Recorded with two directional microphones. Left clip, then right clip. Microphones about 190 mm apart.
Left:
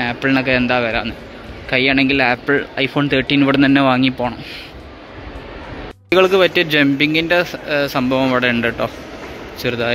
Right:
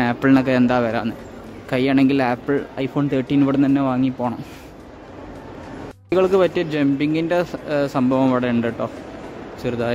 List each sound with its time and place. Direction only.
0.0 s a man's voice: 30° right (ahead or behind)
2.7 s speech: 10° right (ahead or behind)
6.0 s speech: 10° right (ahead or behind)